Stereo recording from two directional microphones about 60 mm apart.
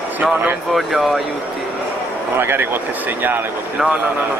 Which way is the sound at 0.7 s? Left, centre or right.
Centre.